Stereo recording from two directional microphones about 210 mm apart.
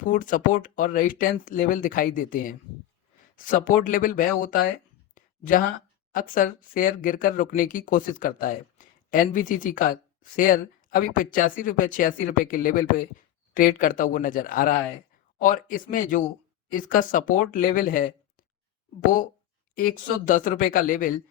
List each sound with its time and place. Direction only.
0.0 s speech: 40° left (ahead or behind)
5.1 s a sound: 40° left (ahead or behind)
6.1 s speech: 40° left (ahead or behind)